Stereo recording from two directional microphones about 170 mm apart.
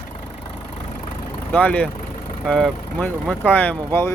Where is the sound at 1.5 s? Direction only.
10° left (ahead or behind).